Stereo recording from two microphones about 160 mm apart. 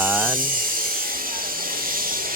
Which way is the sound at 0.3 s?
60° right (ahead or behind).